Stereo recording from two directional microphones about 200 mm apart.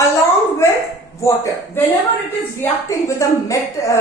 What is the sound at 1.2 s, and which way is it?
A woman's voice, 15° left (ahead or behind).